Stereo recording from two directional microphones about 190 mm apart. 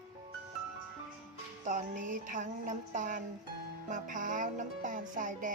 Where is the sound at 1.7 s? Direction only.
45° right (ahead or behind).